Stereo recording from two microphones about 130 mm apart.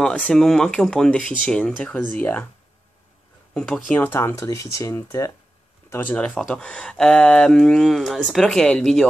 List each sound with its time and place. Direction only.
0.0 s speech: 5° left (ahead or behind)
3.5 s speech: 5° left (ahead or behind); by 5.3 s 25° left (ahead or behind)
5.9 s speech: 15° left (ahead or behind)